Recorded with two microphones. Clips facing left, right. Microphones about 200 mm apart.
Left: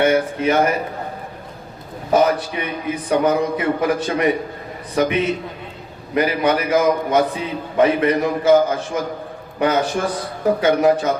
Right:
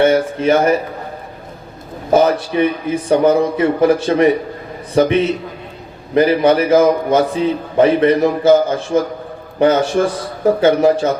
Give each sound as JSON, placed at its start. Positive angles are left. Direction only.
{"t": 0.0, "sound": "a man's voice", "side_deg": -30}
{"t": 2.1, "sound": "a man's voice", "side_deg": -30}